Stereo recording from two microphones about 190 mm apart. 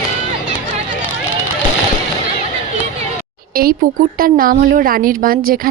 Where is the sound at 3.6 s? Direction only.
50° right (ahead or behind).